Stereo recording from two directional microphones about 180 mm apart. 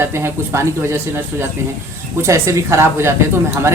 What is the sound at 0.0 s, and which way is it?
Speech, 15° right (ahead or behind).